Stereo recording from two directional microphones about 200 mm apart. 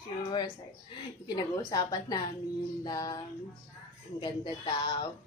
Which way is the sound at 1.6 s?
20° left (ahead or behind).